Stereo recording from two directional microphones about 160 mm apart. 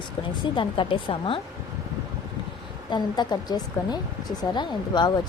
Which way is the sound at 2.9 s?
25° left (ahead or behind).